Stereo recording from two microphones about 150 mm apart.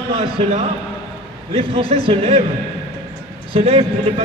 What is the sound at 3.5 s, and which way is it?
Speech, 40° right (ahead or behind).